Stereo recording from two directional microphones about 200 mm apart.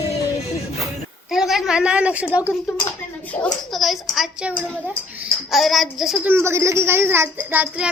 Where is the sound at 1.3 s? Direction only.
Centre (ahead or behind).